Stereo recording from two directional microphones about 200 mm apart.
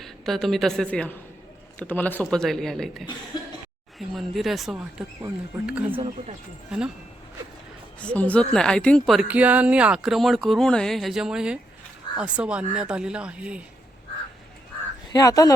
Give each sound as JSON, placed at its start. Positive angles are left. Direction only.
{"t": 0.0, "sound": "a woman's voice", "side_deg": 0}
{"t": 7.9, "sound": "speech", "side_deg": 5}
{"t": 15.1, "sound": "speech", "side_deg": 15}